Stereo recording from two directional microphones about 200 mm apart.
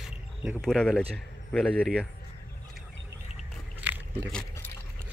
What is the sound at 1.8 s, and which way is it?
Speech, 5° right (ahead or behind).